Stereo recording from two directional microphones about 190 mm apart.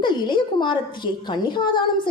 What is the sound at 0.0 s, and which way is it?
A woman's voice, 25° left (ahead or behind).